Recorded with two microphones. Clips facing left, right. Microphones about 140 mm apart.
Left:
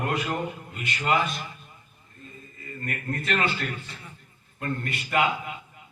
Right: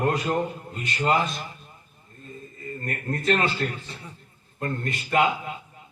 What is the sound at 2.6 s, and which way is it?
A man's voice, 35° right (ahead or behind).